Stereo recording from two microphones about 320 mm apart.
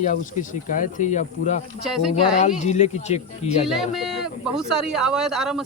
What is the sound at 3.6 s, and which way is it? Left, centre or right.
Speech, centre.